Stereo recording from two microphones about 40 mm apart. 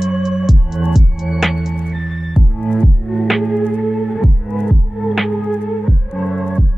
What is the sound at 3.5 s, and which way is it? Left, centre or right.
Music, right.